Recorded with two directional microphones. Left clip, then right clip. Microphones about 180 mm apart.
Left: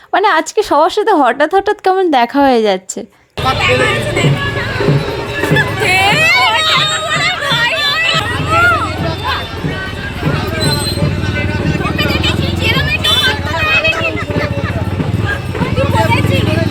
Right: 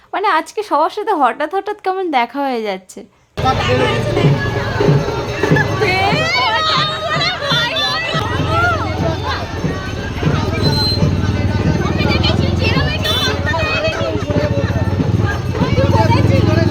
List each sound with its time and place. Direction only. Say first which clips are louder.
0.1 s speech: left 4 dB; 30° left (ahead or behind)
3.4 s speech: left 3 dB; 20° right (ahead or behind)
5.8 s a sound: left 8 dB; 15° right (ahead or behind)
7.2 s a sound: left 2 dB; 5° left (ahead or behind)
8.5 s vehicle: left 6 dB; 30° right (ahead or behind)
13.2 s vehicle: left 4 dB; 5° right (ahead or behind)